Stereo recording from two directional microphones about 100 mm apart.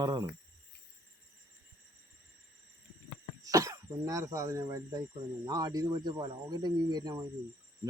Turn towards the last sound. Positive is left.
turn(degrees=-40)  # may be behind; listen again after turning